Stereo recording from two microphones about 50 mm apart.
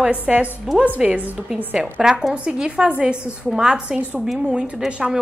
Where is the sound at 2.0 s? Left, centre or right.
Centre.